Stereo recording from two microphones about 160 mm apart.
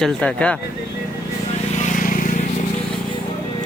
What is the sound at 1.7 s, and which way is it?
Vehicle, 50° left (ahead or behind).